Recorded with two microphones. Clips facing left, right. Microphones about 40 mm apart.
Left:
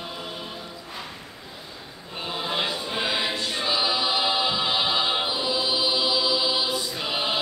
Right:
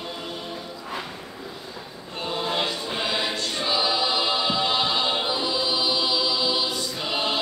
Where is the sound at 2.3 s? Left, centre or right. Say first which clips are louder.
Right 1 dB; centre.